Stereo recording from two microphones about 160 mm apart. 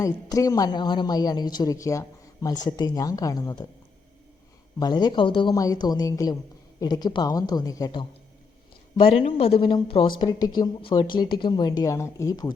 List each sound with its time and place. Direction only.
0.0 s speech: 20° left (ahead or behind)
4.8 s speech: 25° left (ahead or behind)
9.0 s speech: 35° left (ahead or behind)